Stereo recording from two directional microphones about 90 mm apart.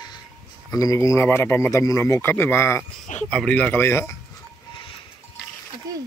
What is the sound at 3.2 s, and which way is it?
Speech, 10° left (ahead or behind).